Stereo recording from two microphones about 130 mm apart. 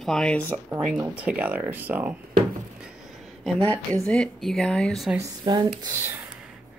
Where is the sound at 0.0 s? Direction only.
5° left (ahead or behind).